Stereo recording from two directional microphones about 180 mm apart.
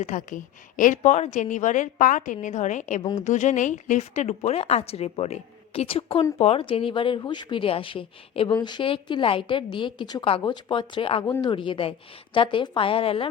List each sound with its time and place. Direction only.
0.0 s a woman's voice: 45° left (ahead or behind)